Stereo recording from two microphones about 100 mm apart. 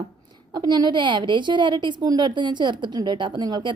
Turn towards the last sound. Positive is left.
turn(degrees=-50)  # may be behind; listen again after turning